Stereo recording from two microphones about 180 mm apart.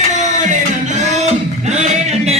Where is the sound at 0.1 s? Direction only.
40° right (ahead or behind).